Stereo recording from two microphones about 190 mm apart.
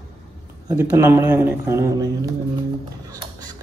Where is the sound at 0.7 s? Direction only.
15° right (ahead or behind).